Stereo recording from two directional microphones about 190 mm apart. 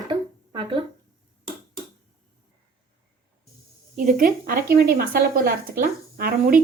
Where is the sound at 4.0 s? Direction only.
45° right (ahead or behind).